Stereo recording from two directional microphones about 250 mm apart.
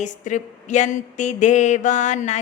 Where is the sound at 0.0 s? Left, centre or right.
Left.